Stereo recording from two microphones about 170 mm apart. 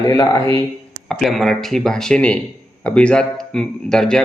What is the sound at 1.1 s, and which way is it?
Speech, centre (ahead or behind).